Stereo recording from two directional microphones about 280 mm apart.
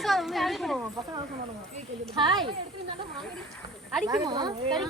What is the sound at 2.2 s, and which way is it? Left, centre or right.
Speech, centre.